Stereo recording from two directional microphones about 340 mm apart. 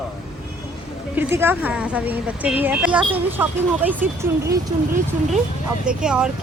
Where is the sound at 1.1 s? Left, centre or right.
Centre.